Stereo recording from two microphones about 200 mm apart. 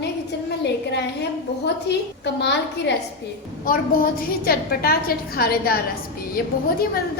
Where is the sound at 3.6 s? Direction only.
45° left (ahead or behind).